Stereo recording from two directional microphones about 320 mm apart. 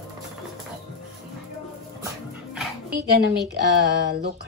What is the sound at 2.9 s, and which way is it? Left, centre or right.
A woman's voice, right.